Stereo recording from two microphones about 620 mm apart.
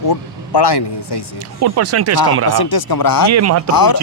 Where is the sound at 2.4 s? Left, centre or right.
Left.